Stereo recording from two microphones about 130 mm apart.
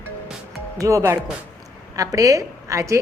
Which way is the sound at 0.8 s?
25° right (ahead or behind).